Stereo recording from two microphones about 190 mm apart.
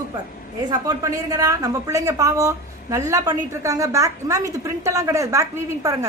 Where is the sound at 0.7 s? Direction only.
20° right (ahead or behind).